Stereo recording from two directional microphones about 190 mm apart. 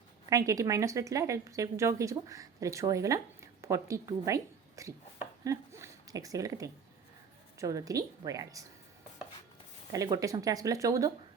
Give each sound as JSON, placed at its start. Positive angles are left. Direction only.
{"t": 0.3, "sound": "speech", "side_deg": -15}
{"t": 9.9, "sound": "speech", "side_deg": -15}